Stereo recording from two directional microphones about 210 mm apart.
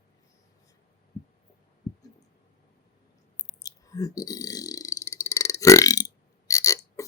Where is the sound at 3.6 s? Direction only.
15° left (ahead or behind).